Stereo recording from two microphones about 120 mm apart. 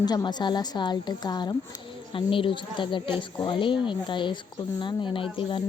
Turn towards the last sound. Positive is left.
turn(degrees=45)  # may be behind; listen again after turning